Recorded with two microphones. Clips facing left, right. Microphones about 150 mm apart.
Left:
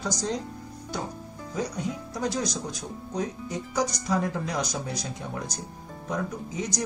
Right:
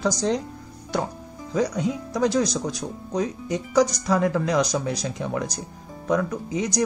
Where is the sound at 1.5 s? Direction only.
90° right.